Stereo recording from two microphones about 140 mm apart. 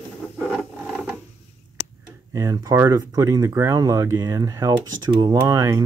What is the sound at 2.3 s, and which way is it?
Speech, 25° right (ahead or behind).